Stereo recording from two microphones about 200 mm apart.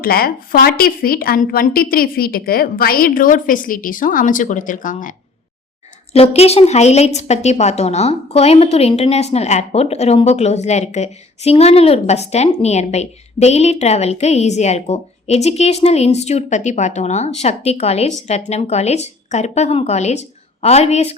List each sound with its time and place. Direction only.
0.0 s a woman's voice: 45° left (ahead or behind)
6.1 s a woman's voice: 30° left (ahead or behind)